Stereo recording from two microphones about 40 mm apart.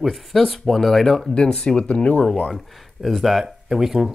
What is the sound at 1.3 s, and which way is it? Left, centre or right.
Speech, left.